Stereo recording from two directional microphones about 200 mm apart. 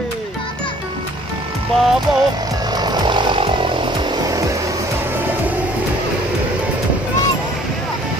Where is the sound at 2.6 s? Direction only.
20° right (ahead or behind).